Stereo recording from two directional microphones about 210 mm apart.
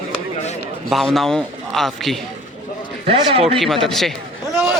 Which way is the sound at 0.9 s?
Centre (ahead or behind).